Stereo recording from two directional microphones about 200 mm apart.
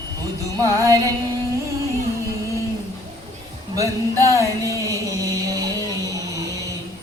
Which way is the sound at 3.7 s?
15° right (ahead or behind).